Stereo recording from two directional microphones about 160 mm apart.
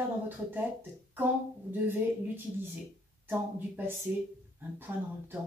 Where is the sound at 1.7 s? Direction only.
10° right (ahead or behind).